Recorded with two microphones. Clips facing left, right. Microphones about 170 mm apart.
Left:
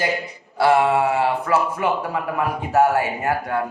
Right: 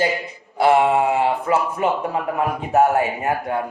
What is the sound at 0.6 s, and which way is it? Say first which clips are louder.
A man's voice: right 1 dB; 20° right (ahead or behind).